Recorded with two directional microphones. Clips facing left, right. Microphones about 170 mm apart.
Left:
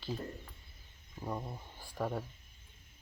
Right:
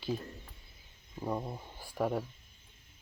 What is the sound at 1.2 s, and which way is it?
Speech, 10° right (ahead or behind).